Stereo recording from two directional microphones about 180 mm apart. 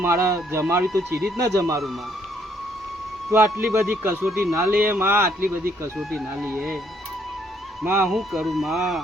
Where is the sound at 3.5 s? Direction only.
5° right (ahead or behind).